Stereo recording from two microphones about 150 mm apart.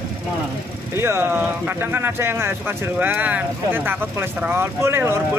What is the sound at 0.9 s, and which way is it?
Speech, 15° right (ahead or behind).